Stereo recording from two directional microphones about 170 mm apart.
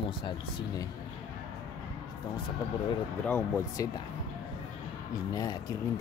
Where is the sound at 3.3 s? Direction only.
10° left (ahead or behind).